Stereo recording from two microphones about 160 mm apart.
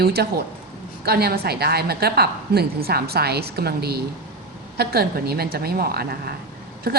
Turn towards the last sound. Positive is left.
turn(degrees=-75)  # may be behind; listen again after turning